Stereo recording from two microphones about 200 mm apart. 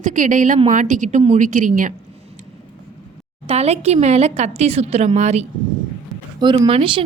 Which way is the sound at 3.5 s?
30° right (ahead or behind).